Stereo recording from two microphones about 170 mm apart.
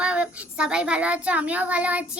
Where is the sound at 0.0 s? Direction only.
5° right (ahead or behind).